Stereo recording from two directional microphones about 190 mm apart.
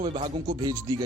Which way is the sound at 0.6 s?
15° right (ahead or behind).